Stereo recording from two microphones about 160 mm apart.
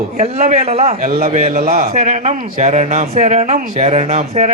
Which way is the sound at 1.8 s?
45° right (ahead or behind).